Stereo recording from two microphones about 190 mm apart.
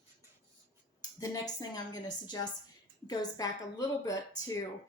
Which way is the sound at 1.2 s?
20° left (ahead or behind).